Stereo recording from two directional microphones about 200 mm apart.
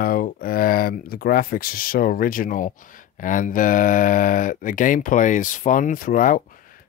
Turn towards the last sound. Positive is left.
turn(degrees=45)  # may be behind; listen again after turning